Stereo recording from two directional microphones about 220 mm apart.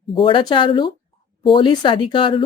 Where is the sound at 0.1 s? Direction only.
25° left (ahead or behind).